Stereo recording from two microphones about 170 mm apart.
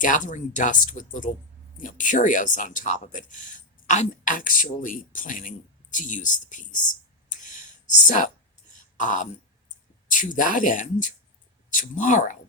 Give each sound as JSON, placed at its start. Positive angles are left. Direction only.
{"t": 0.0, "sound": "speech", "side_deg": 50}